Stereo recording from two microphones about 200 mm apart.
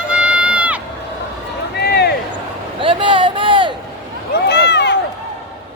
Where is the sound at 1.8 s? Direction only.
55° left (ahead or behind).